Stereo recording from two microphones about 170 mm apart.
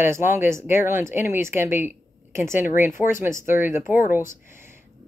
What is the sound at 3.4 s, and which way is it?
Speech, 50° left (ahead or behind).